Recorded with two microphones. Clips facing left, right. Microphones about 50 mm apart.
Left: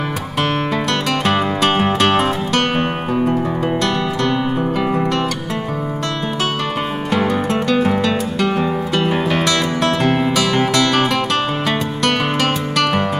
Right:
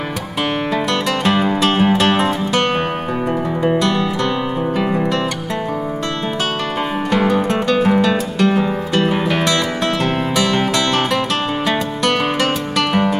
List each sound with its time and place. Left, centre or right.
1.2 s music: centre
3.8 s music: centre
7.1 s music: centre